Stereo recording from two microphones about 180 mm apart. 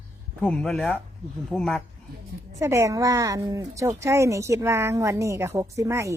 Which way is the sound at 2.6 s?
15° right (ahead or behind).